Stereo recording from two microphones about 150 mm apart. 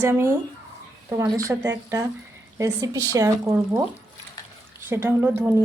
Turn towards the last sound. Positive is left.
turn(degrees=-10)  # may be behind; listen again after turning